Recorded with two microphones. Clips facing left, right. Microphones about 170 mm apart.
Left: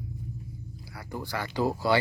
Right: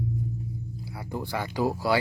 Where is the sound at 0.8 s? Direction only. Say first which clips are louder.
Right 3 dB; 20° right (ahead or behind).